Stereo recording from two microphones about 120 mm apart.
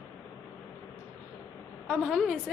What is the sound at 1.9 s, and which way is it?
Speech, centre (ahead or behind).